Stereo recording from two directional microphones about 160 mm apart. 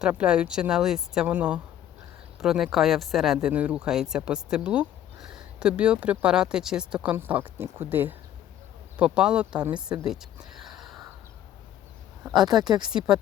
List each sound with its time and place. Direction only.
0.0 s speech: 5° right (ahead or behind)
10.1 s a sound: 5° right (ahead or behind)
12.4 s speech: 25° right (ahead or behind)
12.9 s speech: 5° right (ahead or behind)